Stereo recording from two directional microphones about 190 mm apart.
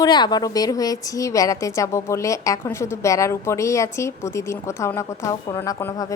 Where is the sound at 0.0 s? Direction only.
20° left (ahead or behind).